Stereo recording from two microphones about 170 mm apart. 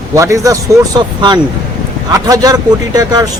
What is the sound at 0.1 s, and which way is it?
A man's voice, 20° right (ahead or behind).